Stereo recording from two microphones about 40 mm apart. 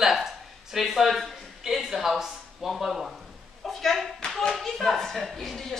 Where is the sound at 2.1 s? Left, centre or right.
Centre.